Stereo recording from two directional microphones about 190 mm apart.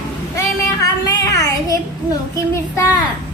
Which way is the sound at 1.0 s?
20° left (ahead or behind).